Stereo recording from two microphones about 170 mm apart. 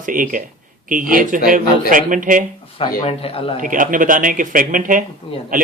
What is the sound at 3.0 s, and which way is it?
Speech, 35° left (ahead or behind).